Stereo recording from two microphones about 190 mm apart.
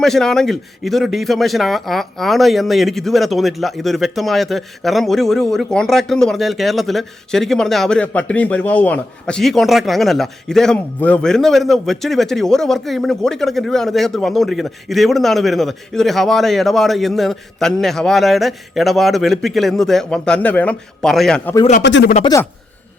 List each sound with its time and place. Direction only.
0.0 s a man's voice: centre (ahead or behind)
21.8 s speech: 70° left (ahead or behind)
22.2 s a man's voice: 20° left (ahead or behind)